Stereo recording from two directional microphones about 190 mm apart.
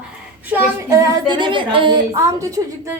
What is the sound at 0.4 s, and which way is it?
A woman's voice, 10° right (ahead or behind).